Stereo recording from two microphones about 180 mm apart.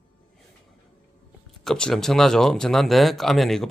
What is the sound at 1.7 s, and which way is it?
Speech, 5° left (ahead or behind).